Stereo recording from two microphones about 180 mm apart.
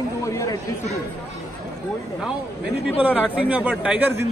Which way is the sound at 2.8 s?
5° right (ahead or behind).